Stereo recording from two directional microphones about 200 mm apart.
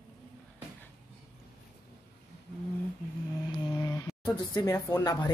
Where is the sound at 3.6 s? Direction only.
20° left (ahead or behind).